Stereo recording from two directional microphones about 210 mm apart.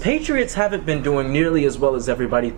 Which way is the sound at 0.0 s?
10° right (ahead or behind).